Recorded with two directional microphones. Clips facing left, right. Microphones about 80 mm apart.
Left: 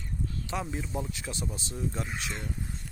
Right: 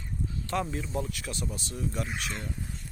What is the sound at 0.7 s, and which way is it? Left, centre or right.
Speech, centre.